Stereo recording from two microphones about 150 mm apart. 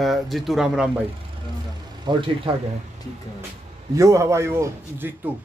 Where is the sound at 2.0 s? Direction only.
35° right (ahead or behind).